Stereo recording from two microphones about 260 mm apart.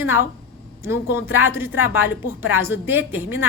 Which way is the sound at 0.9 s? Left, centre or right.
Centre.